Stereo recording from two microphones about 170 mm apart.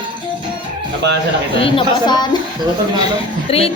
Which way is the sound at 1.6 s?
30° left (ahead or behind).